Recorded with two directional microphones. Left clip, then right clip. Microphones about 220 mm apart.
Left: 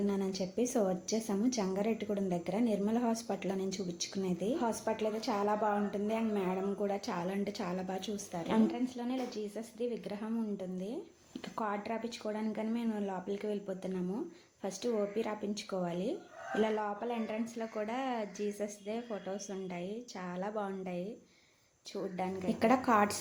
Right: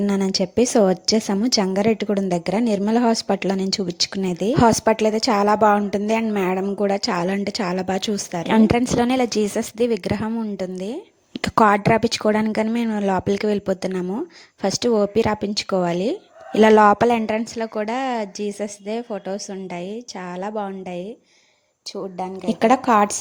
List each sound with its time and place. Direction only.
0.1 s a woman's voice: 45° right (ahead or behind)